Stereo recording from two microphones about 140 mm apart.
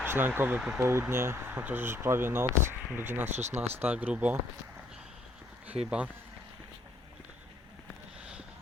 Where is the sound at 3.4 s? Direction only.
55° right (ahead or behind).